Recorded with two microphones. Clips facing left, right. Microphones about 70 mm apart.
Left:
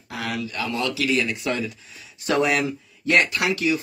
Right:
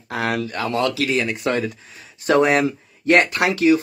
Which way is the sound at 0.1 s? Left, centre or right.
Right.